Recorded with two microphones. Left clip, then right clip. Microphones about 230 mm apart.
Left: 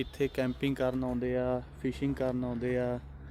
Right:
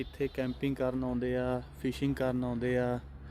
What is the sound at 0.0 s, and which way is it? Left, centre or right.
Speech, left.